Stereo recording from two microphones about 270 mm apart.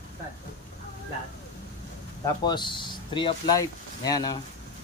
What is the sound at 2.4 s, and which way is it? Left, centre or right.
Speech, centre.